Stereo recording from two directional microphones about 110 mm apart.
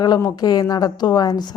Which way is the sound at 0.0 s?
35° left (ahead or behind).